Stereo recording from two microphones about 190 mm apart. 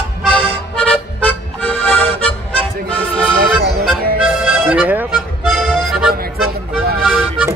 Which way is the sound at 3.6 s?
55° right (ahead or behind).